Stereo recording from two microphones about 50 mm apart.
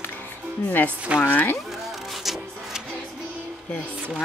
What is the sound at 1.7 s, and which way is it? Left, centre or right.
Music, centre.